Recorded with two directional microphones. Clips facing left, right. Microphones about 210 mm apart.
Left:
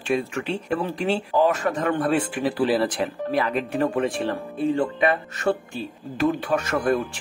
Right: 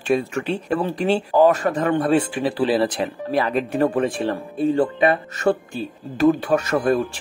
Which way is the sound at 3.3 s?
35° right (ahead or behind).